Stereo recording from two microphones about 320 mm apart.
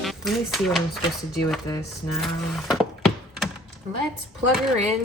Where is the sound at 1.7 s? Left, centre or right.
Centre.